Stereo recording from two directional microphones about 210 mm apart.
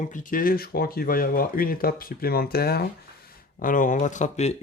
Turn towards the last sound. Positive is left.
turn(degrees=35)  # may be behind; listen again after turning